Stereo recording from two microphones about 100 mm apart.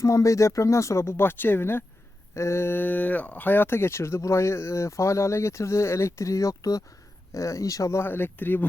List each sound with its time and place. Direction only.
0.0 s speech: 30° left (ahead or behind)